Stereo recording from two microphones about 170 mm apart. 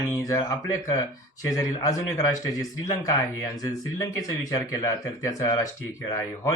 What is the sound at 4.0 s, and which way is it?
Speech, 20° left (ahead or behind).